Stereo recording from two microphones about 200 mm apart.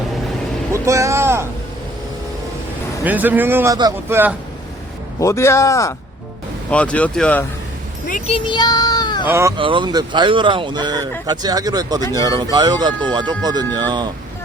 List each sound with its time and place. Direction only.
0.7 s a sound: 15° right (ahead or behind)
3.0 s speech: 10° right (ahead or behind)
5.2 s speech: 15° left (ahead or behind)
8.3 s child singing: 20° left (ahead or behind)
9.2 s speech: 15° right (ahead or behind)
9.6 s speech: 25° right (ahead or behind)